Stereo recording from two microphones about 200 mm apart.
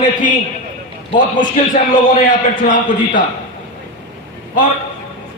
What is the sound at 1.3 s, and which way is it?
A man's voice, 40° left (ahead or behind).